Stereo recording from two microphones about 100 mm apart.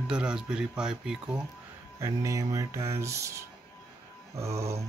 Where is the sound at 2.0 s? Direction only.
30° right (ahead or behind).